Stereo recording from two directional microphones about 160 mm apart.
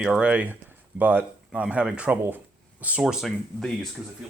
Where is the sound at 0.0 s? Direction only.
5° right (ahead or behind).